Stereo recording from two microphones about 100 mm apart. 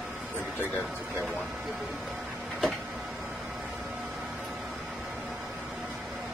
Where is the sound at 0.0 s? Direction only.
15° right (ahead or behind).